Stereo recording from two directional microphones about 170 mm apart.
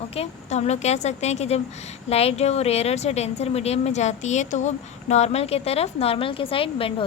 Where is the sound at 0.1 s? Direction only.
40° left (ahead or behind).